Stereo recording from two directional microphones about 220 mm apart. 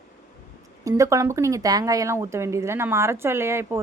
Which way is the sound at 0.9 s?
15° right (ahead or behind).